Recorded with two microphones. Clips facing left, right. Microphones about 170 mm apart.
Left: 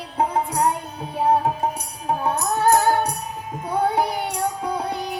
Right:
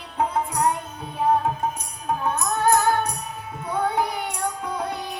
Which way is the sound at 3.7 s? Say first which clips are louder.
Left 3 dB; 35° left (ahead or behind).